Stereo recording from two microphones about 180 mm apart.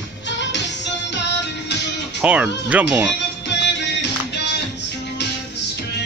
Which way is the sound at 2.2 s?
5° right (ahead or behind).